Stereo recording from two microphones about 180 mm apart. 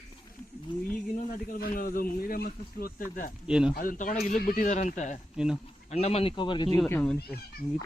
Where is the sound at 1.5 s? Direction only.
50° left (ahead or behind).